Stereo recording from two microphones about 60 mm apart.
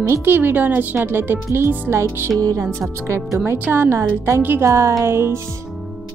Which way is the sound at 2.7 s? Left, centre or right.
Right.